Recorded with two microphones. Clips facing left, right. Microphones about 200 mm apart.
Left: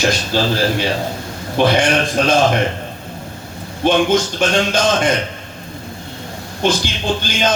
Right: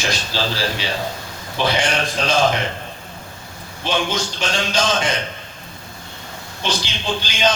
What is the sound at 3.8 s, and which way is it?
Speech, 55° left (ahead or behind).